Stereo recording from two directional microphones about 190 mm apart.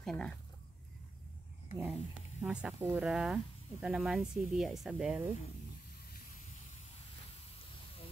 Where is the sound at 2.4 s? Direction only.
5° right (ahead or behind).